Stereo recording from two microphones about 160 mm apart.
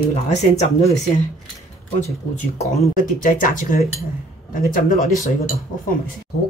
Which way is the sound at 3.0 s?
55° left (ahead or behind).